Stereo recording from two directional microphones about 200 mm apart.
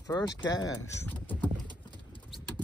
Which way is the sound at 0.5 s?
20° left (ahead or behind).